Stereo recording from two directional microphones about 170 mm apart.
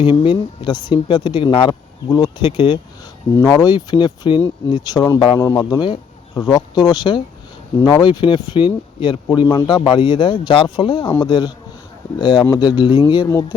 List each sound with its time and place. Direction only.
0.0 s speech: 30° left (ahead or behind)